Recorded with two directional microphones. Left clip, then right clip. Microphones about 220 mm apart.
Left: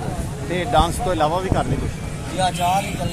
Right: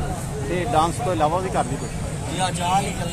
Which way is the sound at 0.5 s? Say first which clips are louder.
Left 2 dB; 40° left (ahead or behind).